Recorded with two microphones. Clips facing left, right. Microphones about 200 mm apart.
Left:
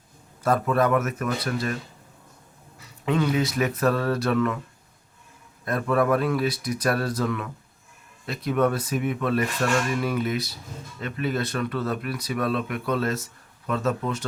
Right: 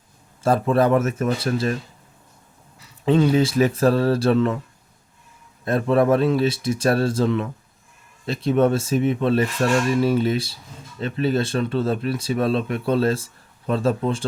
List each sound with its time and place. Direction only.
0.4 s speech: 30° right (ahead or behind)
3.1 s speech: 30° right (ahead or behind)
5.6 s speech: 25° right (ahead or behind)